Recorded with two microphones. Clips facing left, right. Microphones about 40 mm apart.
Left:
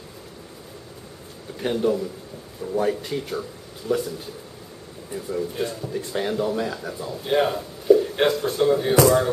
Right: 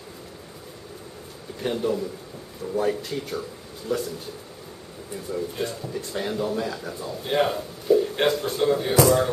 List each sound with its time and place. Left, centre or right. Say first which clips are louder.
1.6 s a man's voice: left 3 dB; centre
5.1 s a man's voice: left 2 dB; centre